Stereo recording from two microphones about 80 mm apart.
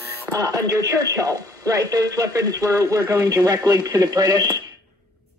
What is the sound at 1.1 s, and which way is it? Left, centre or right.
Speech, right.